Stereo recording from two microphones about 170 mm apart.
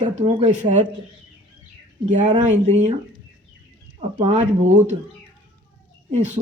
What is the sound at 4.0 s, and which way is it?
Speech, 40° right (ahead or behind).